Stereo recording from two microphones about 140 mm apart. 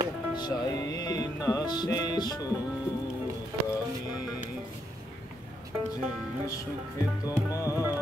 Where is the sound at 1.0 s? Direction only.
25° left (ahead or behind).